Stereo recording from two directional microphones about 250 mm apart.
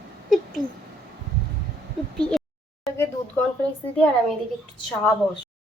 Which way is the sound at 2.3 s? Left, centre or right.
Centre.